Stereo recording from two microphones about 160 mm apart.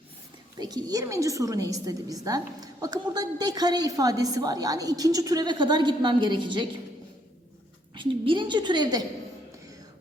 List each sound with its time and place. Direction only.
0.6 s a woman's voice: 25° right (ahead or behind)
7.9 s a woman's voice: 30° right (ahead or behind)